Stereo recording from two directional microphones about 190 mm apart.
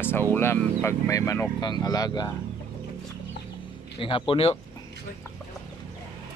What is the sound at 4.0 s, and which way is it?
Speech, 30° left (ahead or behind).